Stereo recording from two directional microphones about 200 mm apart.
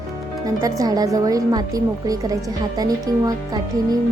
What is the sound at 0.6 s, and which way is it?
A woman's voice, 20° right (ahead or behind).